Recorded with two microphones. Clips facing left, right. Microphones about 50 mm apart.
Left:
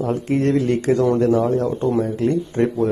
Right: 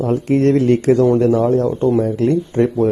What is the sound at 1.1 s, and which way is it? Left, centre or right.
Speech, right.